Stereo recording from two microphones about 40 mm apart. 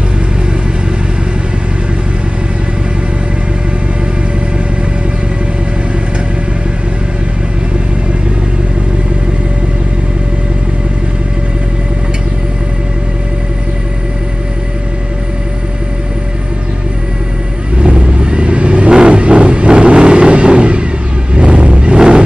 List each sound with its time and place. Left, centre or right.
17.7 s vehicle: right
21.4 s a sound: right
21.9 s music: right